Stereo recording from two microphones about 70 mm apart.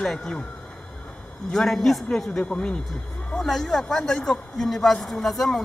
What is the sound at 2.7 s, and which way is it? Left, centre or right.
Speech, centre.